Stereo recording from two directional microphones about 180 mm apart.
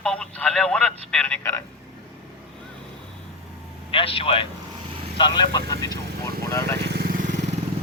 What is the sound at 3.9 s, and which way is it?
A man's voice, 30° left (ahead or behind).